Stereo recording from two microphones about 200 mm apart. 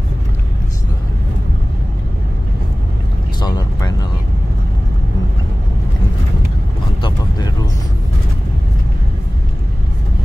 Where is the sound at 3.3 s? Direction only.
20° left (ahead or behind).